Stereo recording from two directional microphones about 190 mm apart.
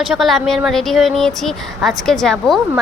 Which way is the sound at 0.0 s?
Centre (ahead or behind).